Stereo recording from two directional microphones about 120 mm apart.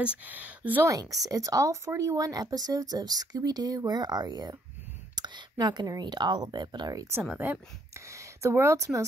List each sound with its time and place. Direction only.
0.0 s speech: 10° right (ahead or behind)
0.8 s speech: 30° right (ahead or behind)
7.2 s speech: 15° right (ahead or behind)
8.1 s speech: 25° right (ahead or behind)